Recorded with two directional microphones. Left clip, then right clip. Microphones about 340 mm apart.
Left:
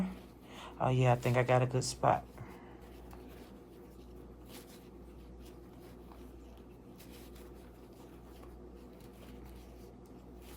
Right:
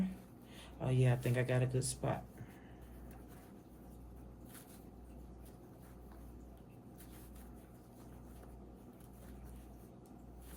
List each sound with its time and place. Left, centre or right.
0.5 s speech: centre